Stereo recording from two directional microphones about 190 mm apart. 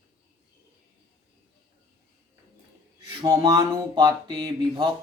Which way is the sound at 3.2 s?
15° right (ahead or behind).